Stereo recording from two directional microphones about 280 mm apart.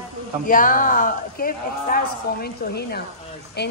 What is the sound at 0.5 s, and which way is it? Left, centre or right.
A woman's voice, left.